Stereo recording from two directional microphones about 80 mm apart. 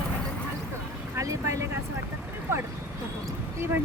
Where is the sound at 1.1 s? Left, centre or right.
Right.